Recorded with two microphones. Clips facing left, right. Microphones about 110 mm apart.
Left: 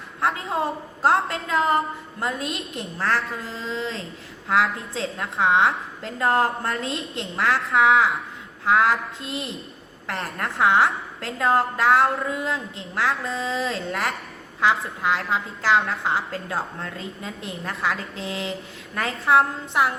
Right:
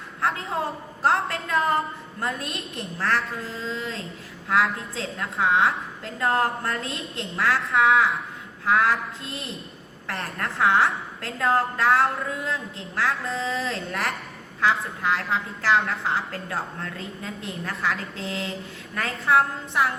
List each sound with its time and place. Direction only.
0.2 s a woman's voice: 25° left (ahead or behind)